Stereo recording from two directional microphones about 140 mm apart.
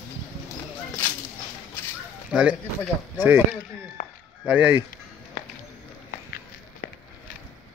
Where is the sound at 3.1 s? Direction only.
15° right (ahead or behind).